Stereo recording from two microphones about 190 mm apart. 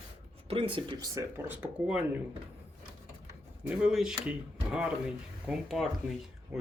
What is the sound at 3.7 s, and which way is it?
Speech, 5° right (ahead or behind).